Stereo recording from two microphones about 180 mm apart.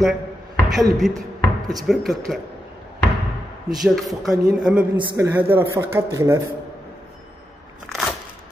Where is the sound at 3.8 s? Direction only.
Centre (ahead or behind).